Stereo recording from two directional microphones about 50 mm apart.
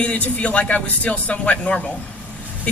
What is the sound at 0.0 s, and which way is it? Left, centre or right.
Speech, left.